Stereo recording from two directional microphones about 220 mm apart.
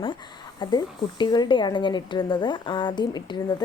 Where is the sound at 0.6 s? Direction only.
20° left (ahead or behind).